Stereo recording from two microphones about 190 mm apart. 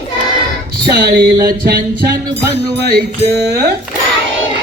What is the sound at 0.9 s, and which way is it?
Music, 55° right (ahead or behind).